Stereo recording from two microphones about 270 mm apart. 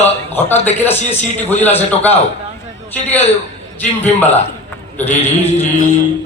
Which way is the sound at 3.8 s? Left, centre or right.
Centre.